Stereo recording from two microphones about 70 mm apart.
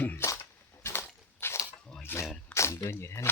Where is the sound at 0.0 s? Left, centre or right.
Left.